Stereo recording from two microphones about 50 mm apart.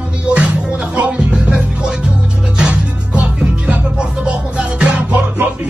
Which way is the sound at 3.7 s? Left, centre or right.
Centre.